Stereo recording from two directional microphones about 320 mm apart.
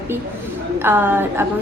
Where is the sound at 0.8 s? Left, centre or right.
Centre.